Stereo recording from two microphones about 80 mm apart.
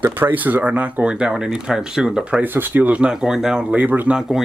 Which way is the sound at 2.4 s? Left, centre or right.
Right.